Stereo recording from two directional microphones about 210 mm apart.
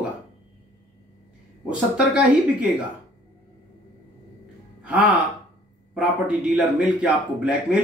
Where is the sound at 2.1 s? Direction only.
5° right (ahead or behind).